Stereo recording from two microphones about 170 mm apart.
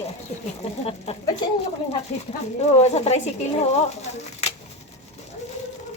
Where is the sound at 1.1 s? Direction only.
40° left (ahead or behind).